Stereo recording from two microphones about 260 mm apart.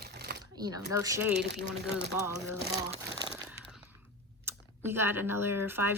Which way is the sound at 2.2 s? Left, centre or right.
Centre.